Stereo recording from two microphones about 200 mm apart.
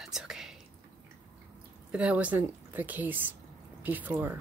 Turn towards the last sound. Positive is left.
turn(degrees=-10)  # may be behind; listen again after turning